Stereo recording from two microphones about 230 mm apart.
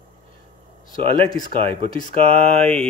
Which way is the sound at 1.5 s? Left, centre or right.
Right.